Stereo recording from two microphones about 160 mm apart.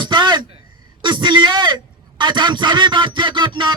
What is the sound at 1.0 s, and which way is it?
A man's voice, 30° right (ahead or behind).